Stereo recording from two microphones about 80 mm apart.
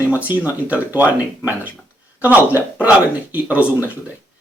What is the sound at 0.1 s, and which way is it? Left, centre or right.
Speech, right.